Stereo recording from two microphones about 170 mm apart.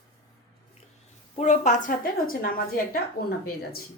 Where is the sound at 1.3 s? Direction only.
45° left (ahead or behind).